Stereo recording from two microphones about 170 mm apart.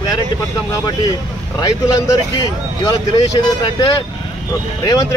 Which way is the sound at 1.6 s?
20° left (ahead or behind).